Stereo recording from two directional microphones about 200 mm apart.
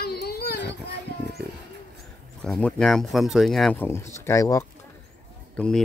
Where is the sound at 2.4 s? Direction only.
5° left (ahead or behind).